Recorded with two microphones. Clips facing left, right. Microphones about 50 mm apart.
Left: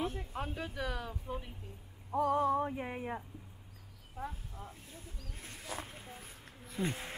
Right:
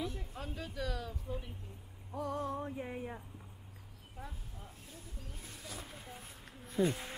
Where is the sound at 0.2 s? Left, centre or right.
Left.